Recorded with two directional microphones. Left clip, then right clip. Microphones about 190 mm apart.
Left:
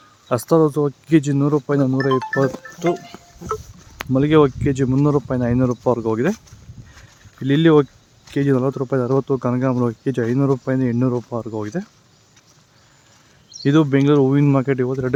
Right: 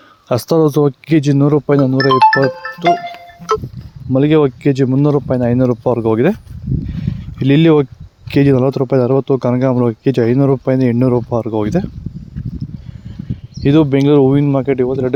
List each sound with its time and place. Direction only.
0.3 s speech: 35° right (ahead or behind)
2.0 s speech: 45° right (ahead or behind)
4.1 s speech: 25° right (ahead or behind)
6.9 s a sound: 30° right (ahead or behind)
8.3 s speech: 30° right (ahead or behind)
13.6 s speech: 25° right (ahead or behind)